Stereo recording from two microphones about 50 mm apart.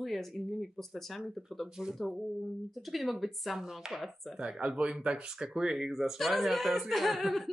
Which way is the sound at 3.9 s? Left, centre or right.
Centre.